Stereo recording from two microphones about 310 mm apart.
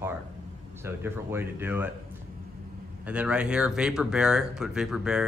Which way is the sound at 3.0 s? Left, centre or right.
Centre.